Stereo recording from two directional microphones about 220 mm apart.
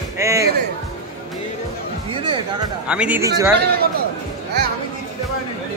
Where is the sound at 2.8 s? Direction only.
5° right (ahead or behind).